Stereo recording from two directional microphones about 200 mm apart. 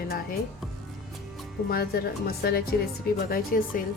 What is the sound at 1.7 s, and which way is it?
Speech, 50° left (ahead or behind).